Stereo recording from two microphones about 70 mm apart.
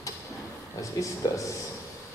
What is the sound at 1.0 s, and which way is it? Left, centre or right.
Speech, left.